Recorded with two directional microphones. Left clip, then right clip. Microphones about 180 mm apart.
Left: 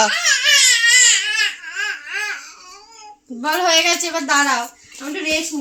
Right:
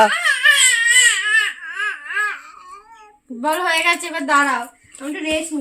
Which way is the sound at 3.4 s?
35° left (ahead or behind).